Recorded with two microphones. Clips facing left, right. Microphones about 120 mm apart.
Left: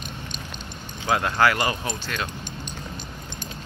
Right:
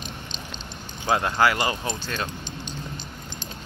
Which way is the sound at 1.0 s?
25° right (ahead or behind).